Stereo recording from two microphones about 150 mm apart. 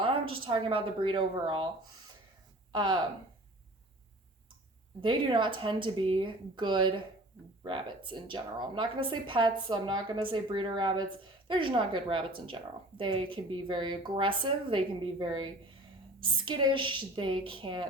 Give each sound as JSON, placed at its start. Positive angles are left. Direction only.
{"t": 0.0, "sound": "a woman's voice", "side_deg": -35}
{"t": 2.7, "sound": "a woman's voice", "side_deg": -30}
{"t": 4.9, "sound": "a woman's voice", "side_deg": -30}